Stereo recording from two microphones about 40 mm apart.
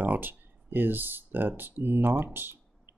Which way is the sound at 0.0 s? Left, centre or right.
Right.